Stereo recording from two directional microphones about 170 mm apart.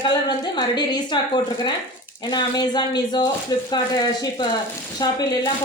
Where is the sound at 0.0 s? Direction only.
25° left (ahead or behind).